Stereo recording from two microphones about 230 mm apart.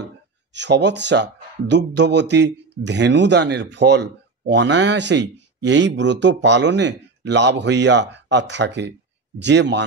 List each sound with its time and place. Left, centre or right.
0.5 s speech: right